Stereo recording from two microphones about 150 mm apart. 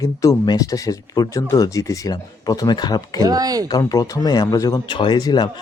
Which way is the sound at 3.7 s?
25° left (ahead or behind).